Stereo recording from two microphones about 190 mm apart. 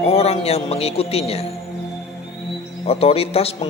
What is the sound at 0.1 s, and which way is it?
Speech, 30° left (ahead or behind).